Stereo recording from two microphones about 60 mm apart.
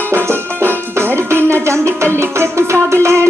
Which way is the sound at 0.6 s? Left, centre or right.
Right.